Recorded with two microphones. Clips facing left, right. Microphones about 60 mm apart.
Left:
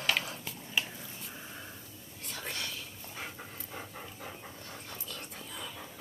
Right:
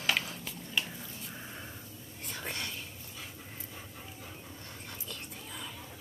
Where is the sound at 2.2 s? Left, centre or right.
Centre.